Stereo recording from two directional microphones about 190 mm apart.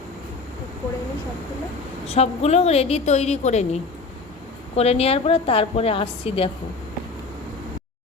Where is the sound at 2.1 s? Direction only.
35° left (ahead or behind).